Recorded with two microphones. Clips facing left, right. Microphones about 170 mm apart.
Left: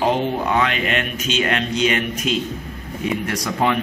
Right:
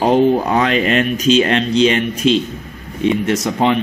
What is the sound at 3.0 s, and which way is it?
Speech, 25° right (ahead or behind).